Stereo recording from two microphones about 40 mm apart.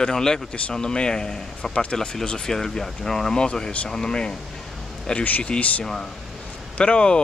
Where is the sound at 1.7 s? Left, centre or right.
Left.